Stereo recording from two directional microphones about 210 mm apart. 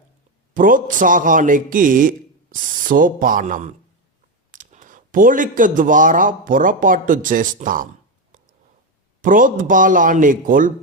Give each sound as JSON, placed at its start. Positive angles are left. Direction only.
{"t": 0.5, "sound": "a man's voice", "side_deg": -40}
{"t": 9.2, "sound": "a man's voice", "side_deg": -40}